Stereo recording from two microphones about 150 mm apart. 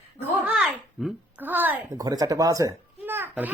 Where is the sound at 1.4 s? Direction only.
10° right (ahead or behind).